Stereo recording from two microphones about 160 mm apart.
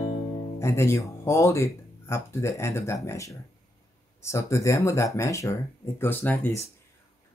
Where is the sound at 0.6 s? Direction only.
15° left (ahead or behind).